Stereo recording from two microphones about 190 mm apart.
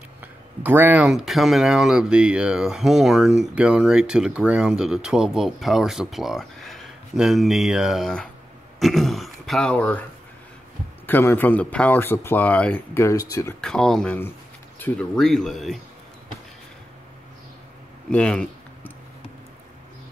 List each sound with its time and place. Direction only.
0.6 s speech: 10° right (ahead or behind); by 10.0 s 10° left (ahead or behind)
11.1 s speech: 10° left (ahead or behind)
13.6 s speech: 5° left (ahead or behind)
18.1 s speech: 5° left (ahead or behind)